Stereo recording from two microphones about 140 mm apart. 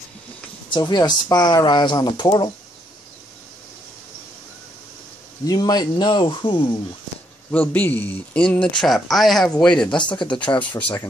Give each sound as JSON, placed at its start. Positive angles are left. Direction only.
{"t": 0.7, "sound": "speech", "side_deg": 30}
{"t": 5.5, "sound": "speech", "side_deg": 30}
{"t": 7.5, "sound": "speech", "side_deg": 10}
{"t": 9.8, "sound": "speech", "side_deg": 35}